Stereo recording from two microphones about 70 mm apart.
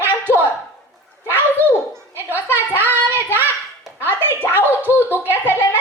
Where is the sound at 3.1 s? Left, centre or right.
Right.